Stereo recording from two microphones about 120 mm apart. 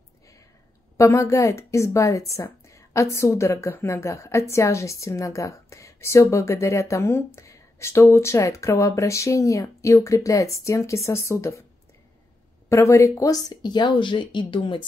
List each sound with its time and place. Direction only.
0.9 s speech: 25° left (ahead or behind)
12.6 s speech: 25° left (ahead or behind); by 14.8 s 45° left (ahead or behind)